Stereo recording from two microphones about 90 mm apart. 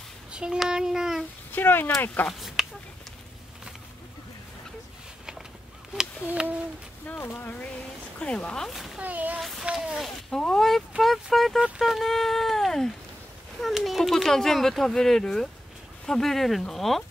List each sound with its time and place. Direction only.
0.3 s child singing: 10° right (ahead or behind)
1.5 s speech: 25° left (ahead or behind)
2.2 s a sound: centre (ahead or behind)
6.2 s child singing: 15° right (ahead or behind)
7.1 s speech: 20° left (ahead or behind); by 9.0 s centre (ahead or behind)
9.0 s child singing: 15° right (ahead or behind)
9.4 s speech: centre (ahead or behind)
9.7 s child singing: 10° right (ahead or behind)
10.0 s speech: 5° left (ahead or behind)